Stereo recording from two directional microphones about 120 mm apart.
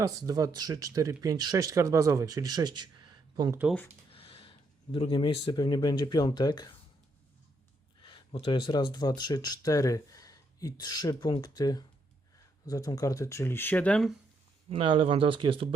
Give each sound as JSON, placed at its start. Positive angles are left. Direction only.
{"t": 0.0, "sound": "speech", "side_deg": -30}
{"t": 3.6, "sound": "speech", "side_deg": -10}
{"t": 4.1, "sound": "speech", "side_deg": 50}
{"t": 8.3, "sound": "speech", "side_deg": 45}
{"t": 14.7, "sound": "speech", "side_deg": -50}